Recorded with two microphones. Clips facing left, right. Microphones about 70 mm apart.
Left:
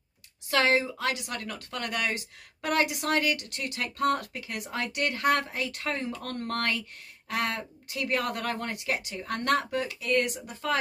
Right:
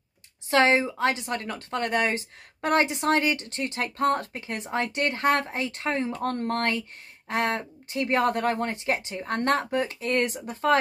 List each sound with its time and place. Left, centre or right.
0.5 s speech: right